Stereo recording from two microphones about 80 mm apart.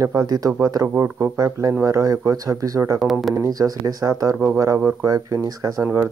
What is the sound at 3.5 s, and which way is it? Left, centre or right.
Speech, right.